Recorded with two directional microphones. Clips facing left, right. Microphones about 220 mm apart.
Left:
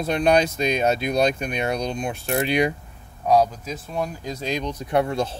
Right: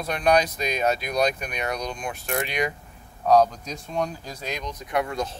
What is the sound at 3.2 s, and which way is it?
Speech, 10° left (ahead or behind).